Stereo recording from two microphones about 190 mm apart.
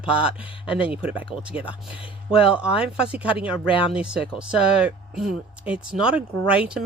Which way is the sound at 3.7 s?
25° left (ahead or behind).